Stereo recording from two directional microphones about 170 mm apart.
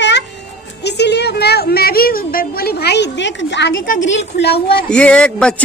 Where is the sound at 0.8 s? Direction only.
80° left.